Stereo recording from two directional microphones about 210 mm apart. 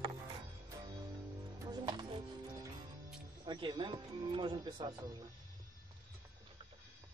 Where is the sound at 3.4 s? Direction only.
20° right (ahead or behind).